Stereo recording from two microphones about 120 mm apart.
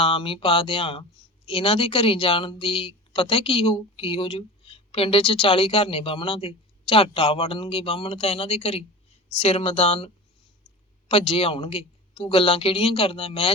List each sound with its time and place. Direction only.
0.0 s speech: 50° left (ahead or behind)
11.1 s speech: 50° left (ahead or behind)